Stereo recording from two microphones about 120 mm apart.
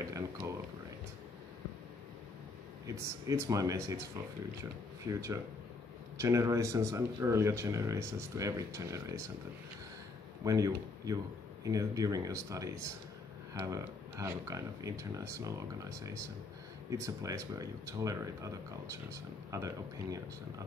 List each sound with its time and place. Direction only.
0.0 s a sound: 25° right (ahead or behind)
2.9 s speech: 25° right (ahead or behind)
10.4 s speech: 30° right (ahead or behind)